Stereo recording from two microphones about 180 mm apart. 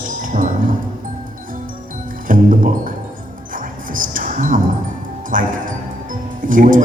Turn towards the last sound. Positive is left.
turn(degrees=-45)  # may be behind; listen again after turning